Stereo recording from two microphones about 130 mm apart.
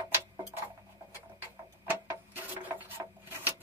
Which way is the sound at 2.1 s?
15° right (ahead or behind).